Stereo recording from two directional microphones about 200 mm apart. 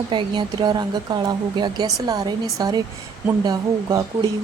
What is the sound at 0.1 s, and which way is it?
Speech, 25° right (ahead or behind).